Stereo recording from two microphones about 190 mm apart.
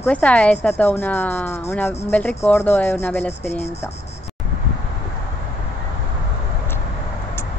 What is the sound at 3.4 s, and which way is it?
Speech, 35° left (ahead or behind).